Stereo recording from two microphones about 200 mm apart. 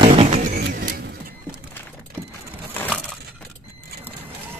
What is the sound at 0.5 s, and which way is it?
Vehicle, 55° right (ahead or behind).